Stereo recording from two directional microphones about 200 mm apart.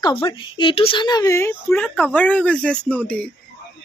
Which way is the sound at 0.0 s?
20° left (ahead or behind).